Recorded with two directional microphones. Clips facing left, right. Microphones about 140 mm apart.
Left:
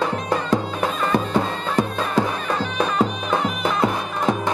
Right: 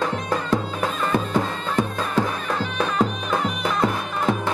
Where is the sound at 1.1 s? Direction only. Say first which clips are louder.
Left 1 dB; 10° left (ahead or behind).